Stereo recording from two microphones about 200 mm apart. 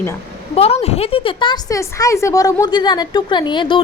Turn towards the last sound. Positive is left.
turn(degrees=25)  # may be behind; listen again after turning